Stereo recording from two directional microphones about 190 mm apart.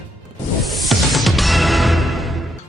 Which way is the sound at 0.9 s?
Centre (ahead or behind).